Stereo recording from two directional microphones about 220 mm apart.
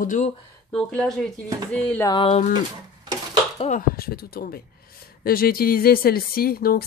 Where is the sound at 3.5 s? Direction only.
30° left (ahead or behind).